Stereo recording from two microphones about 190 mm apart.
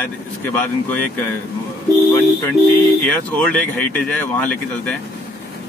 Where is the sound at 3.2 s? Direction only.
5° left (ahead or behind).